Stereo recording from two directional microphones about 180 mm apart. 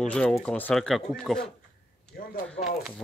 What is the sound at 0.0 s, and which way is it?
Speech, 5° left (ahead or behind).